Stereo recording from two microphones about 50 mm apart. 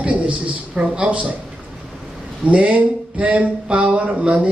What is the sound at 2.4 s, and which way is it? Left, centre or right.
Speech, right.